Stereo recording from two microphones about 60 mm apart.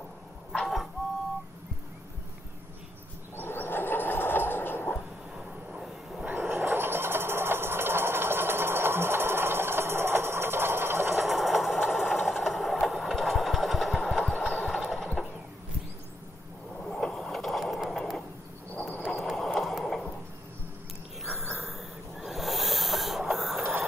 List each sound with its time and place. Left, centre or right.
0.6 s printer: centre
3.3 s a sound: left
5.3 s train: centre
6.5 s engine: right
11.1 s sewing machine: centre
12.8 s engine: centre
14.8 s pulleys: centre
16.8 s a sound: centre
21.3 s a sound: centre
23.6 s printer: right